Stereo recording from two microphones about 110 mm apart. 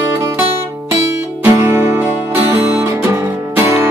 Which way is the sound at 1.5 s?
25° right (ahead or behind).